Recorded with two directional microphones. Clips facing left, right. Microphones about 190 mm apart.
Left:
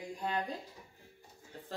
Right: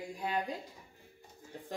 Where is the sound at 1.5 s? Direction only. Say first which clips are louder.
Right 2 dB; 15° right (ahead or behind).